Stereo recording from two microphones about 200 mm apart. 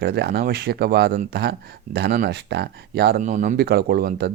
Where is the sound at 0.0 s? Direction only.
55° right (ahead or behind).